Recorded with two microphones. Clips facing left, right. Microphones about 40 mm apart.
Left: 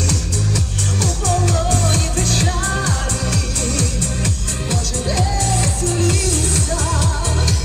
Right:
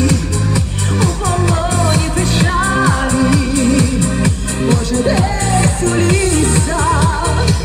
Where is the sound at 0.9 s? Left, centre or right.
Centre.